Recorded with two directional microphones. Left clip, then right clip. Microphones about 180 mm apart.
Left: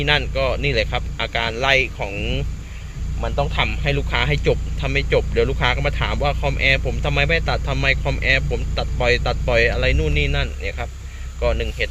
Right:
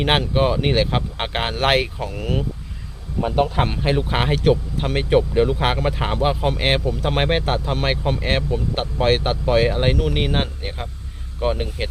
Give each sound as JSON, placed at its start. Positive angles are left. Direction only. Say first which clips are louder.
{"t": 0.0, "sound": "a man's voice", "louder": "right 1 dB", "side_deg": -15}